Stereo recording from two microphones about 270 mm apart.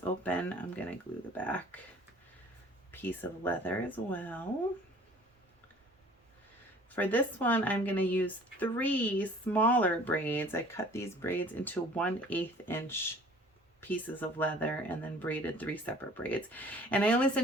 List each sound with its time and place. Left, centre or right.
0.0 s speech: centre
2.9 s a woman's voice: centre
6.9 s a woman's voice: centre